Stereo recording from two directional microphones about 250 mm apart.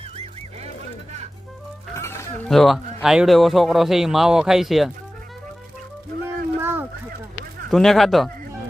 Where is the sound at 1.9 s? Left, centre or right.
Centre.